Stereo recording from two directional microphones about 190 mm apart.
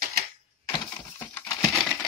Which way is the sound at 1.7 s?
Centre (ahead or behind).